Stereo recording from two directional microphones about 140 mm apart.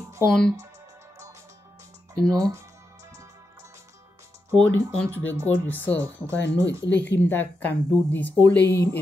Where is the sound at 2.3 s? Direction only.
25° right (ahead or behind).